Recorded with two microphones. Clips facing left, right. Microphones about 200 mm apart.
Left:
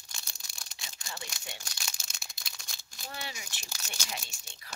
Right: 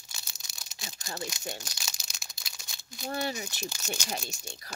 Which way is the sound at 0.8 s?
40° right (ahead or behind).